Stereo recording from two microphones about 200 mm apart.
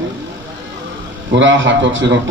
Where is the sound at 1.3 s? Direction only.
70° right (ahead or behind).